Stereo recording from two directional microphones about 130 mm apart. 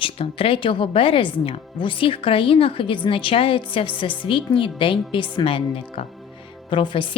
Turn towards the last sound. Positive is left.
turn(degrees=40)  # may be behind; listen again after turning